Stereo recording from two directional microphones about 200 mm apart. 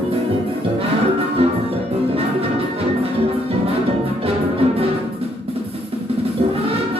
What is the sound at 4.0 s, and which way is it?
Music, 30° right (ahead or behind).